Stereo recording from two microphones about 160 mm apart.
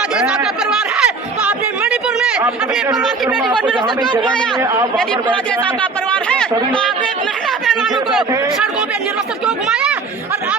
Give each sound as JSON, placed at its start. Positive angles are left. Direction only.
{"t": 0.9, "sound": "chatter", "side_deg": -5}
{"t": 3.4, "sound": "speech", "side_deg": 0}
{"t": 4.6, "sound": "speech", "side_deg": -15}
{"t": 5.8, "sound": "speech", "side_deg": 5}
{"t": 7.7, "sound": "a sound", "side_deg": 0}